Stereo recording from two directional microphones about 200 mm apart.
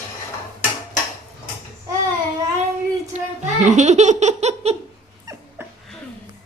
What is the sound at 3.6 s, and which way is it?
Laughter, 35° right (ahead or behind).